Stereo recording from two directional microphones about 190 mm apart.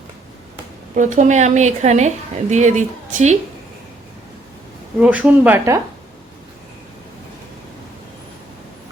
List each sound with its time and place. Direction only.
0.9 s a woman's voice: 40° right (ahead or behind)
4.9 s speech: 5° right (ahead or behind)